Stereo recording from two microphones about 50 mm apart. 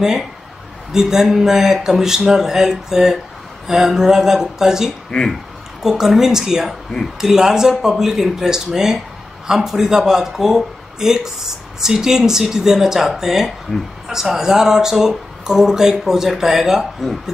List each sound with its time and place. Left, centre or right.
0.9 s speech: centre
5.1 s speech: centre
5.8 s speech: centre